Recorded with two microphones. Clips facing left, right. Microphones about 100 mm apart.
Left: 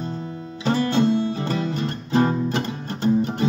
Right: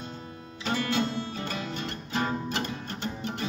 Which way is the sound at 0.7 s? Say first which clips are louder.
Left 8 dB; 35° left (ahead or behind).